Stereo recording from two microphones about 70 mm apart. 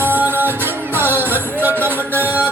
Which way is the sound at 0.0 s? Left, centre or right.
Right.